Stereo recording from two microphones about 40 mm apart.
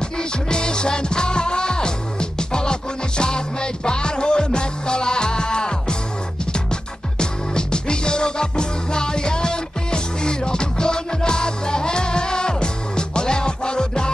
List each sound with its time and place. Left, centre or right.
0.2 s music: left